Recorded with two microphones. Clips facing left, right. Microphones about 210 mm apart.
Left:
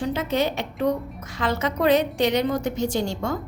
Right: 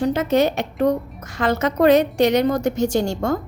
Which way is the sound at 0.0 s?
45° right (ahead or behind).